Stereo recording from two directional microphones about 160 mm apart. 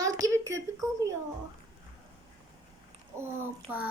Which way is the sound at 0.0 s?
20° right (ahead or behind).